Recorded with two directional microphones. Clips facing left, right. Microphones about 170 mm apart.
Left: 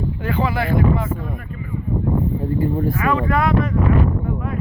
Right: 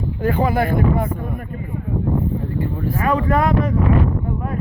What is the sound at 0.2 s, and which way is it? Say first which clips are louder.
Speech: right 5 dB; 45° right (ahead or behind).